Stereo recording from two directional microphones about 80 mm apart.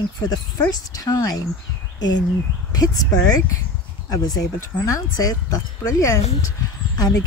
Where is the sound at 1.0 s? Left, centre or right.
Left.